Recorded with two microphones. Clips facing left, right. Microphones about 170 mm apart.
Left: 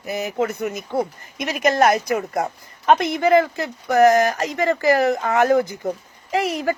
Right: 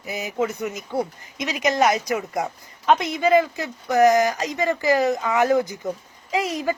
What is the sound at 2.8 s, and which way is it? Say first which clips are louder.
Speech: left 2 dB; 65° left (ahead or behind).